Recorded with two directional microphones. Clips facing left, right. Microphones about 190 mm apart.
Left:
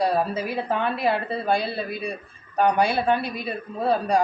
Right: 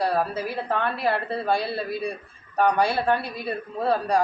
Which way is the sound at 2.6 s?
15° left (ahead or behind).